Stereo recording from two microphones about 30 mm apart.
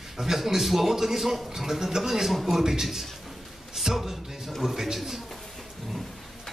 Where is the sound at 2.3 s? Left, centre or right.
Centre.